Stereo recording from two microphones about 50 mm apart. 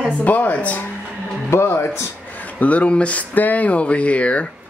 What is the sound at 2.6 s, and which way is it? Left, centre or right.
Speech, left.